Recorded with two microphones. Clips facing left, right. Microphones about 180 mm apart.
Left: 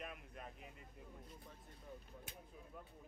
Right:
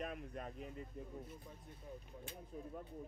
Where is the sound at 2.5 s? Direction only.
45° right (ahead or behind).